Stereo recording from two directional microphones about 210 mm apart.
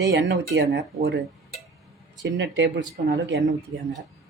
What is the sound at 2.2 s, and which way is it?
Speech, 60° right (ahead or behind).